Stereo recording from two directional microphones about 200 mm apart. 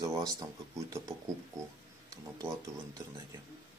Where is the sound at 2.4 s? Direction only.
15° right (ahead or behind).